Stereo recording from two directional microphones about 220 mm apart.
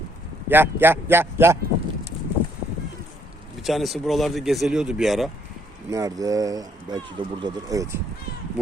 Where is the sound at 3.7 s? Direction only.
Centre (ahead or behind).